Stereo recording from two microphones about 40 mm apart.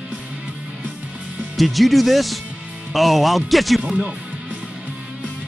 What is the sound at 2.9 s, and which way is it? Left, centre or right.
Speech, centre.